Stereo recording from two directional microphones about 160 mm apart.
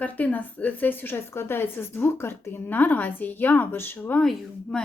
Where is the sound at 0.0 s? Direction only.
10° left (ahead or behind).